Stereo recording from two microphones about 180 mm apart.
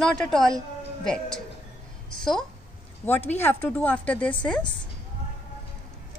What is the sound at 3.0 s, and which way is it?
A woman's voice, 10° left (ahead or behind).